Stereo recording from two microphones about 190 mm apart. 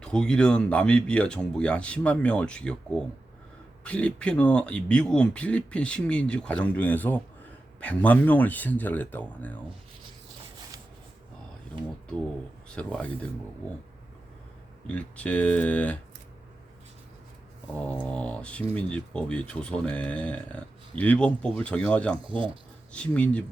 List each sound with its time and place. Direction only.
0.0 s speech: 5° left (ahead or behind)
12.6 s speech: 5° left (ahead or behind)
14.8 s speech: 5° left (ahead or behind)
18.1 s speech: 5° left (ahead or behind)
22.2 s speech: 25° right (ahead or behind)
22.9 s speech: 5° left (ahead or behind)